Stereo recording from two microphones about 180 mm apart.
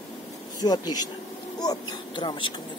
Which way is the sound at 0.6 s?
20° left (ahead or behind).